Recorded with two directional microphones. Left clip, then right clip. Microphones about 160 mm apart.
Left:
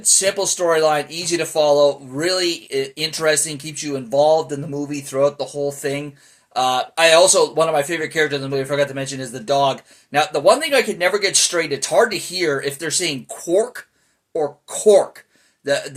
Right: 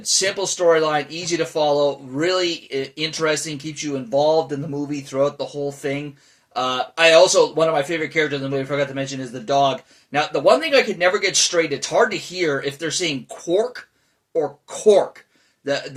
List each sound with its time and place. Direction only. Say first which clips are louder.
0.2 s speech: left 1 dB; 25° left (ahead or behind)